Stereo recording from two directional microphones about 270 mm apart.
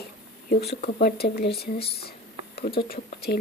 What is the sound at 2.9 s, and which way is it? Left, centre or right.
Speech, left.